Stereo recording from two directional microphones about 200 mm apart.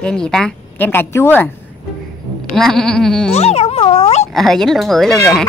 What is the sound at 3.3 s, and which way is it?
Speech, 30° left (ahead or behind).